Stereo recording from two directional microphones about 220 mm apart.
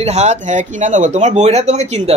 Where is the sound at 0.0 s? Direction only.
30° right (ahead or behind).